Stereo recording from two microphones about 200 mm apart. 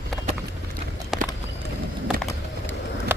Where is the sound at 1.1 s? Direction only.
Centre (ahead or behind).